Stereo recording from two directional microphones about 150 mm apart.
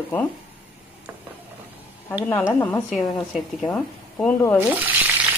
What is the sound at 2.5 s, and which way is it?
Speech, 15° left (ahead or behind).